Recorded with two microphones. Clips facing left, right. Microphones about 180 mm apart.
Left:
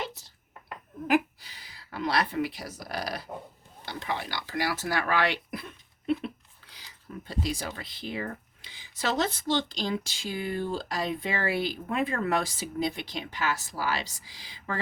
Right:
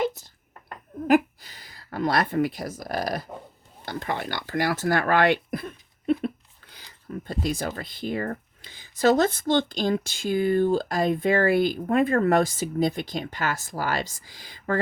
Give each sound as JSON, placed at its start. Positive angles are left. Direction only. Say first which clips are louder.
{"t": 1.0, "sound": "speech", "louder": "right 5 dB", "side_deg": -45}